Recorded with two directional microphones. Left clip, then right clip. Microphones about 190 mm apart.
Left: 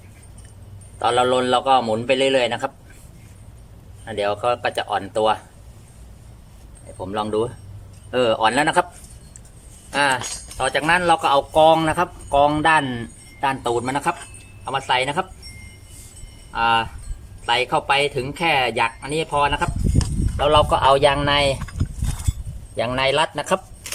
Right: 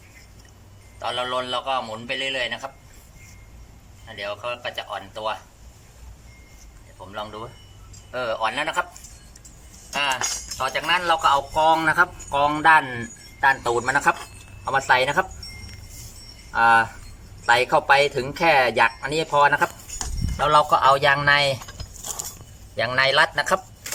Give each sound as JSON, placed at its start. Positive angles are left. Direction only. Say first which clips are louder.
{"t": 1.0, "sound": "a man's voice", "louder": "left 8 dB", "side_deg": 55}
{"t": 4.0, "sound": "a man's voice", "louder": "left 9 dB", "side_deg": 60}
{"t": 7.0, "sound": "a man's voice", "louder": "left 11 dB", "side_deg": 55}
{"t": 9.9, "sound": "speech", "louder": "left 5 dB", "side_deg": 60}
{"t": 10.6, "sound": "speech", "louder": "left 4 dB", "side_deg": 40}
{"t": 11.5, "sound": "speech", "louder": "left 3 dB", "side_deg": 20}
{"t": 16.5, "sound": "speech", "louder": "right 2 dB", "side_deg": 5}
{"t": 22.8, "sound": "speech", "louder": "right 1 dB", "side_deg": 15}